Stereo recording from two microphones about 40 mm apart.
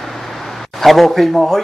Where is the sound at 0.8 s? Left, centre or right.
Centre.